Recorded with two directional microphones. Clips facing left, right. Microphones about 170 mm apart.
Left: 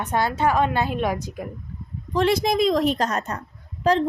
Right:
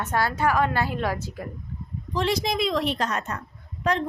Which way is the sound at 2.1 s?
55° left (ahead or behind).